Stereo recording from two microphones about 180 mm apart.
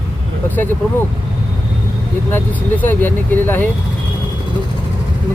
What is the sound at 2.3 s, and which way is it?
Speech, 10° left (ahead or behind).